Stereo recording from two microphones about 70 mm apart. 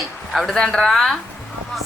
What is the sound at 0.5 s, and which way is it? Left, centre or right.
Speech, centre.